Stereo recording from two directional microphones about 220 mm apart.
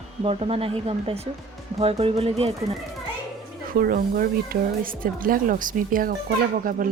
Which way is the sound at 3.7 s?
40° right (ahead or behind).